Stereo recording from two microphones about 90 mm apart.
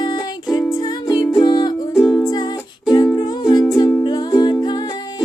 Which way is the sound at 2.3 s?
50° left (ahead or behind).